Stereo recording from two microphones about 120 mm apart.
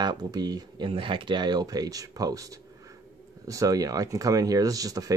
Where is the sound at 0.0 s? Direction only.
35° right (ahead or behind).